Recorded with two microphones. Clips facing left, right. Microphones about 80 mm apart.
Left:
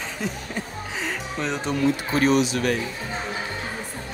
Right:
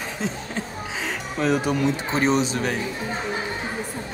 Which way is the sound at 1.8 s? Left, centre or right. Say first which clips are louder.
Left 5 dB; right.